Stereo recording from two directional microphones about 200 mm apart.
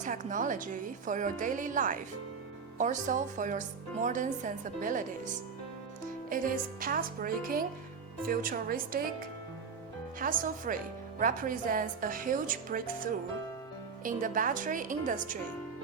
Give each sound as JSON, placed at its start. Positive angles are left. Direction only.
{"t": 0.0, "sound": "a woman's voice", "side_deg": -40}
{"t": 6.3, "sound": "a woman's voice", "side_deg": -45}
{"t": 10.2, "sound": "a woman's voice", "side_deg": -45}